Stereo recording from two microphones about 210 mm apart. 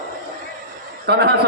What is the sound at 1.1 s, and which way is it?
Speech, 50° right (ahead or behind).